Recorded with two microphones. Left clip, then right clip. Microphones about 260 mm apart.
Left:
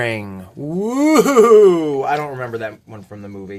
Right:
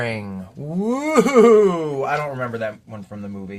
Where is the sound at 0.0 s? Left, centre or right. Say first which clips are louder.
Left 4 dB; left.